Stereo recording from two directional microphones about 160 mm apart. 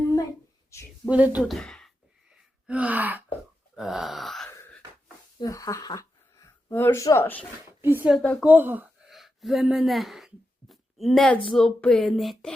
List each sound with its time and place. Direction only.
1.0 s speech: 10° right (ahead or behind)
2.6 s gasp: 10° right (ahead or behind)
3.8 s groan: centre (ahead or behind)
5.4 s speech: 20° left (ahead or behind)
7.8 s speech: 10° right (ahead or behind)
8.1 s speech: 5° left (ahead or behind)
8.4 s gasp: 10° right (ahead or behind)
9.0 s speech: centre (ahead or behind)